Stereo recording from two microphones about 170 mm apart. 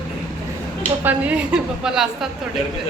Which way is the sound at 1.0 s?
10° right (ahead or behind).